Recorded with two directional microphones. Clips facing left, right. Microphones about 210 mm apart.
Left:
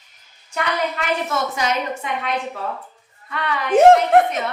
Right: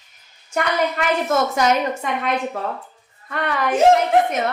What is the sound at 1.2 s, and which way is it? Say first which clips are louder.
A woman's voice: right 5 dB; 45° right (ahead or behind).